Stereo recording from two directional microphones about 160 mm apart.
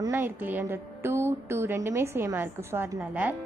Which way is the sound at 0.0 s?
15° right (ahead or behind).